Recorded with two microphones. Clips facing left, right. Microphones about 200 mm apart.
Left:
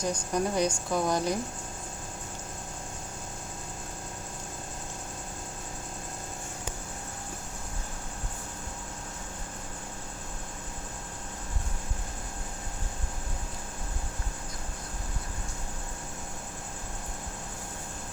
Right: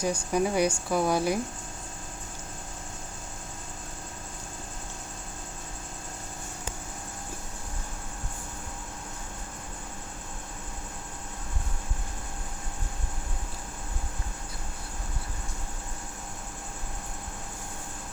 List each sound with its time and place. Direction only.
0.0 s speech: 10° right (ahead or behind)